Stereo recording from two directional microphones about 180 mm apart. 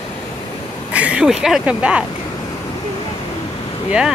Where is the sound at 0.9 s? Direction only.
5° right (ahead or behind).